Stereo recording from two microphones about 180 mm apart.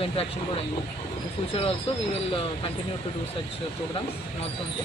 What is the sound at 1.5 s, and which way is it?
Speech, 35° left (ahead or behind).